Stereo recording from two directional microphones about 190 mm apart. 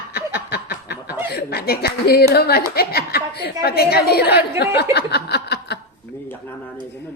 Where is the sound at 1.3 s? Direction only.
55° left (ahead or behind).